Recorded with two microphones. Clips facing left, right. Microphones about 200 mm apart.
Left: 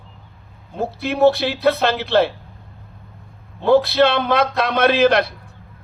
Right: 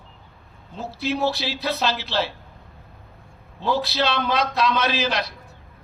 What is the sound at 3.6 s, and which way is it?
A man's voice, 55° left (ahead or behind).